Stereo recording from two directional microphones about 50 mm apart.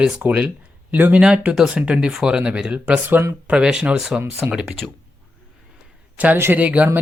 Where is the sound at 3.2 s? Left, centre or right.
Right.